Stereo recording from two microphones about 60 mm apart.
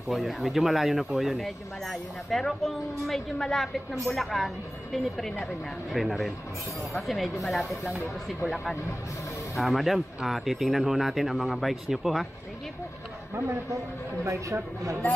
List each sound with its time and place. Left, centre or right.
0.1 s speech: centre
9.6 s speech: centre
14.2 s speech: right